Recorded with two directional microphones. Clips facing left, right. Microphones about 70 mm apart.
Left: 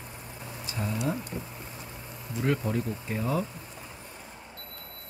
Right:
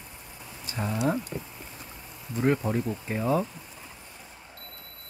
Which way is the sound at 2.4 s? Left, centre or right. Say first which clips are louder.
Right 3 dB; right.